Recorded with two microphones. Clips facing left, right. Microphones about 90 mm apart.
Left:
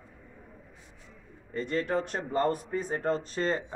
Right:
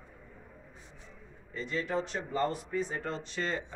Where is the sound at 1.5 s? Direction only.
50° left (ahead or behind).